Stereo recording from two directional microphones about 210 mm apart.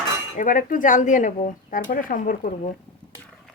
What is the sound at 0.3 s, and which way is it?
Speech, 40° left (ahead or behind).